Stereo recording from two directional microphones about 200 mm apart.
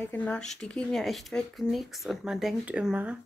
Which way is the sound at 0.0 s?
10° left (ahead or behind).